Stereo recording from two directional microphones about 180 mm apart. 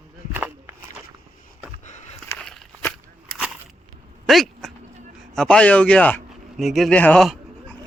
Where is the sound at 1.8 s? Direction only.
40° left (ahead or behind).